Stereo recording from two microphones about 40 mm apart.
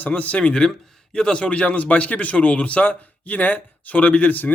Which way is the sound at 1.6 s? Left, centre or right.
Left.